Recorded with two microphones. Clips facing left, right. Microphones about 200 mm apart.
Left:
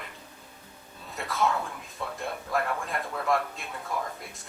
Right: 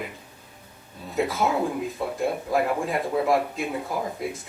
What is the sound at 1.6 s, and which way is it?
Speech, 30° right (ahead or behind).